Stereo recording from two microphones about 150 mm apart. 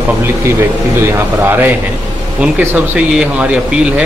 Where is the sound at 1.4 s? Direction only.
15° right (ahead or behind).